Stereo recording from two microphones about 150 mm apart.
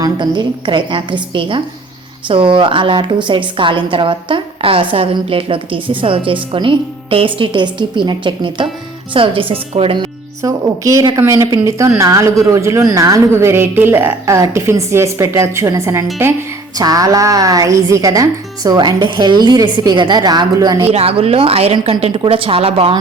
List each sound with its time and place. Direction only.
0.0 s a woman's voice: 30° right (ahead or behind)
10.4 s speech: 20° right (ahead or behind)
20.9 s a woman's voice: 40° right (ahead or behind)